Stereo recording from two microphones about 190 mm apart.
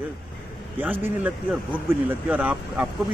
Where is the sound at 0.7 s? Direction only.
10° right (ahead or behind).